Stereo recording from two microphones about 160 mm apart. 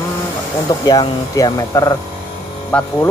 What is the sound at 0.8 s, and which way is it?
Speech, 25° left (ahead or behind).